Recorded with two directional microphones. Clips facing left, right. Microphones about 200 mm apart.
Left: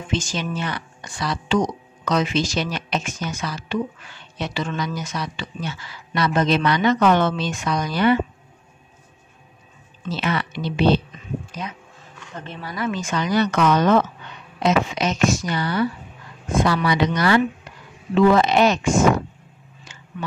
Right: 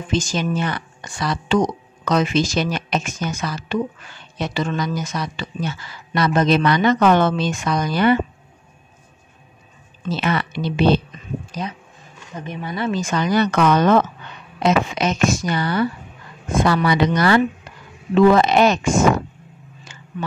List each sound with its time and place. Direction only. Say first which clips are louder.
0.1 s a woman's voice: right 4 dB; 40° right (ahead or behind)
10.1 s a woman's voice: right 2 dB; 50° right (ahead or behind)
11.6 s speech: right 4 dB; 35° right (ahead or behind)
12.4 s speech: right 4 dB; 15° right (ahead or behind)
12.7 s a woman's voice: right 3 dB; 35° right (ahead or behind)